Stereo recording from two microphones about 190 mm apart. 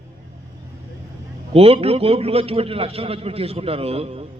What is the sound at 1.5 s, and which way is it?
A man's voice, 30° right (ahead or behind).